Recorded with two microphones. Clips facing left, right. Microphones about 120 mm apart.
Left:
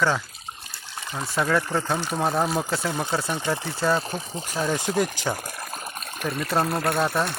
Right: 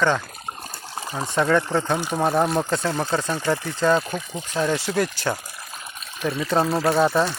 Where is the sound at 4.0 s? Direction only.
30° left (ahead or behind).